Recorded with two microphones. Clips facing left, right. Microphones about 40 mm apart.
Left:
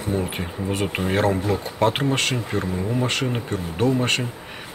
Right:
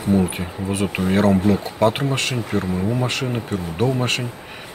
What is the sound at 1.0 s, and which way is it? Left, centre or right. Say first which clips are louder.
Speech: right 5 dB; centre.